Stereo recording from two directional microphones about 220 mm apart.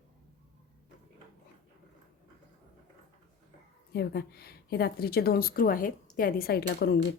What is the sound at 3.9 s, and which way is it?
A woman's voice, 45° left (ahead or behind).